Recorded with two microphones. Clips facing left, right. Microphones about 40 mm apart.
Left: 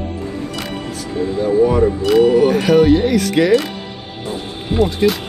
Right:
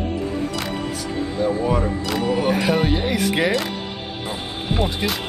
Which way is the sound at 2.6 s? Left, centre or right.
Centre.